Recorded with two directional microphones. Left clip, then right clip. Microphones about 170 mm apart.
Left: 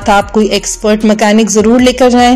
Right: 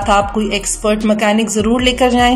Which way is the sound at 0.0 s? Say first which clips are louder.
Left 5 dB; 35° left (ahead or behind).